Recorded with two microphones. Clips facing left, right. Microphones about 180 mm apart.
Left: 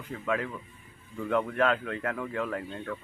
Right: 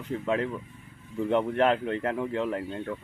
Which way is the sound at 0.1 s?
25° right (ahead or behind).